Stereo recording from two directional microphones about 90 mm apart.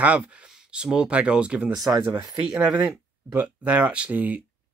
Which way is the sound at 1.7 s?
45° right (ahead or behind).